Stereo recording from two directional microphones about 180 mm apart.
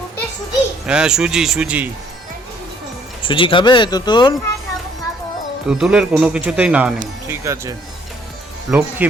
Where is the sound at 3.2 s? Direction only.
30° left (ahead or behind).